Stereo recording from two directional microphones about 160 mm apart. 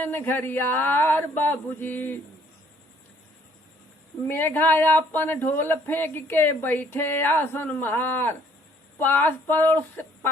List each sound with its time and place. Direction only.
0.0 s speech: 15° left (ahead or behind)
4.3 s speech: 15° left (ahead or behind)